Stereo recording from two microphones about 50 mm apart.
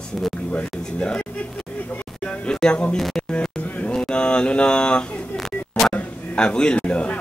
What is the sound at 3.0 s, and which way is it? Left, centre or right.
Speech, centre.